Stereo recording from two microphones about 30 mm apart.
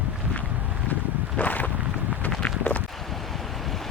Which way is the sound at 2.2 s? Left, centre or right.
Left.